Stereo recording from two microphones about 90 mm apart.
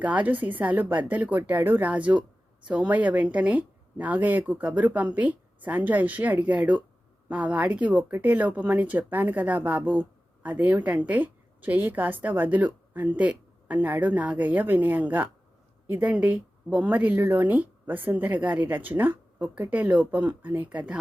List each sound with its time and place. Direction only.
0.0 s a woman's voice: 15° right (ahead or behind)